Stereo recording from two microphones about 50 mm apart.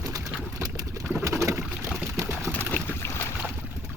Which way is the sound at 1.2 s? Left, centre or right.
Right.